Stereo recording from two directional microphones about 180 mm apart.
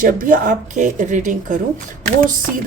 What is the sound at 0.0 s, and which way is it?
Speech, 50° right (ahead or behind).